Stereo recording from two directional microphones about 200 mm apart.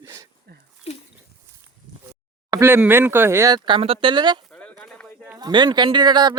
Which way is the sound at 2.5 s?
15° right (ahead or behind).